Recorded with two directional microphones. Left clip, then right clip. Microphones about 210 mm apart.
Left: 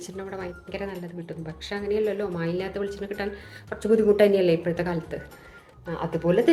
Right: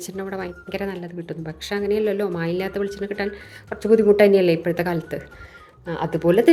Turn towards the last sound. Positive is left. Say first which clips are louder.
# right 5 dB
turn(degrees=-40)  # may be behind; listen again after turning